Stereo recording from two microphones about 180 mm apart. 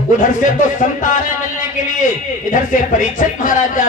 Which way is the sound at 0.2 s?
45° left (ahead or behind).